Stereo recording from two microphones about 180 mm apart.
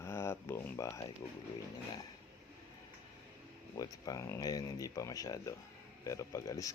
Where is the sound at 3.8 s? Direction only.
20° left (ahead or behind).